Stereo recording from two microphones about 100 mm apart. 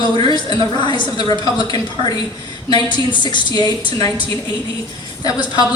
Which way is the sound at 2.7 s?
50° left (ahead or behind).